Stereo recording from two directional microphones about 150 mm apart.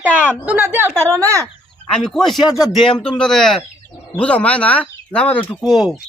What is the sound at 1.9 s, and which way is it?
Speech, centre (ahead or behind).